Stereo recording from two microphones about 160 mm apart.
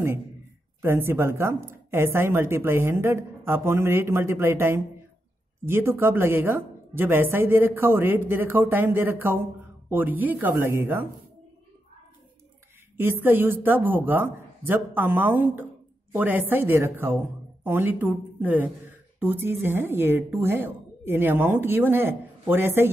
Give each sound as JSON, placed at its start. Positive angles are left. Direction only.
{"t": 0.8, "sound": "a woman's voice", "side_deg": -15}
{"t": 12.9, "sound": "a woman's voice", "side_deg": -15}